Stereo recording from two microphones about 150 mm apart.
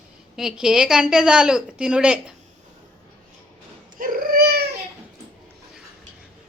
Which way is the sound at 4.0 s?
75° right (ahead or behind).